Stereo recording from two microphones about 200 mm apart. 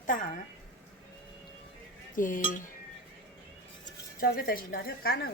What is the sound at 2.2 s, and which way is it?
Speech, 40° left (ahead or behind).